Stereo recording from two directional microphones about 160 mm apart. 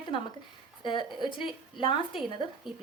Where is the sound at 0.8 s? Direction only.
30° left (ahead or behind).